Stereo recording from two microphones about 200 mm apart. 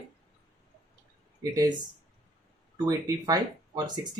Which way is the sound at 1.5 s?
20° right (ahead or behind).